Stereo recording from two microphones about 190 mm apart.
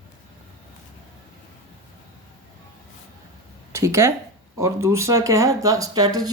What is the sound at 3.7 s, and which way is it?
Speech, 15° right (ahead or behind).